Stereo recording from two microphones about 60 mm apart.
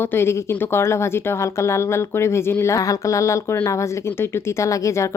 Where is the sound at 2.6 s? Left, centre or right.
Left.